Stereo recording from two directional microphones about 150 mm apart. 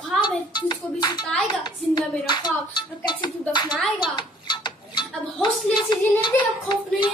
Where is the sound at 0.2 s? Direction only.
30° left (ahead or behind).